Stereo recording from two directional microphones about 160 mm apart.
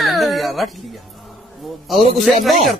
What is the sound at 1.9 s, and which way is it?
Speech, centre (ahead or behind).